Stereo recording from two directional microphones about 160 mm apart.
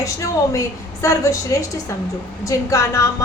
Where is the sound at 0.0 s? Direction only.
20° left (ahead or behind).